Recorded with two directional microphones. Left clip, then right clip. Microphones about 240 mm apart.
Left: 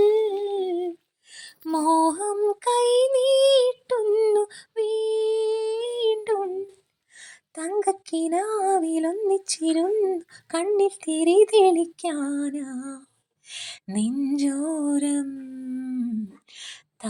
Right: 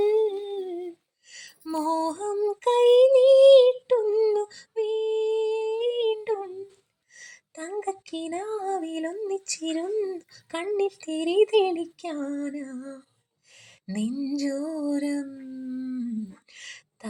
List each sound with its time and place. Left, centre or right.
0.0 s humming: left
1.3 s music: left
1.6 s lullaby: left
7.2 s female singing: left
13.9 s a sound: left